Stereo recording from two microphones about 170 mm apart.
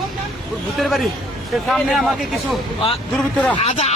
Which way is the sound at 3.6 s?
40° left (ahead or behind).